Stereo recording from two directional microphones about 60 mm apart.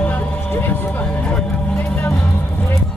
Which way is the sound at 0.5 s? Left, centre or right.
Left.